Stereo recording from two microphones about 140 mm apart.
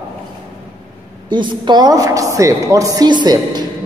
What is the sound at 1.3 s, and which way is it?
A woman's voice, 35° right (ahead or behind).